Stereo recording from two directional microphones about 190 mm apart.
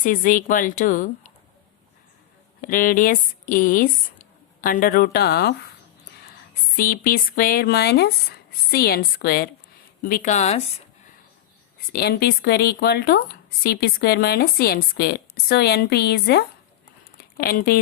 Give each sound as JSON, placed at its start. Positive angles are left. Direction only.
{"t": 0.0, "sound": "speech", "side_deg": 45}
{"t": 2.6, "sound": "speech", "side_deg": 45}
{"t": 6.7, "sound": "speech", "side_deg": 50}
{"t": 11.9, "sound": "speech", "side_deg": 55}